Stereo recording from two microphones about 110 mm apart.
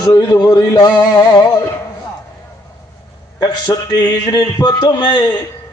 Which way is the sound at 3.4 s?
35° left (ahead or behind).